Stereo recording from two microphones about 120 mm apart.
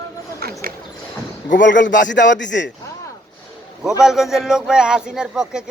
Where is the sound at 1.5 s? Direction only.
90° left.